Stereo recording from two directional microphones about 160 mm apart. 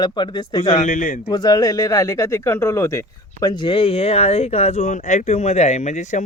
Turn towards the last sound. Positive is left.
turn(degrees=50)  # may be behind; listen again after turning